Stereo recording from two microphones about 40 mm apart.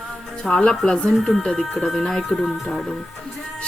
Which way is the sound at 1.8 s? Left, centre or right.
Centre.